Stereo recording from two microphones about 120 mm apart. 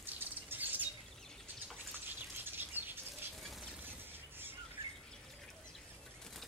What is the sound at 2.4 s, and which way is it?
Bird, 15° right (ahead or behind).